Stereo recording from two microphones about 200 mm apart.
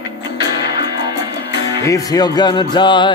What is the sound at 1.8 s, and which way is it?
Speech, 15° left (ahead or behind).